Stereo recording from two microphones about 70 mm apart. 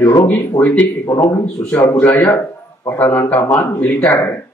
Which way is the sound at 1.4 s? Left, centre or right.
Left.